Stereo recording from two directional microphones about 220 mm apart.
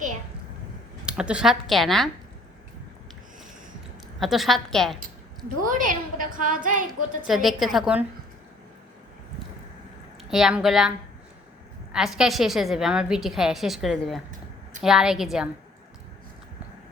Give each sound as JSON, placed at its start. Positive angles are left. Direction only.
{"t": 1.0, "sound": "a woman's voice", "side_deg": -5}
{"t": 4.2, "sound": "a woman's voice", "side_deg": 0}
{"t": 5.6, "sound": "a woman's voice", "side_deg": -35}
{"t": 7.3, "sound": "a woman's voice", "side_deg": 0}
{"t": 10.2, "sound": "a woman's voice", "side_deg": 0}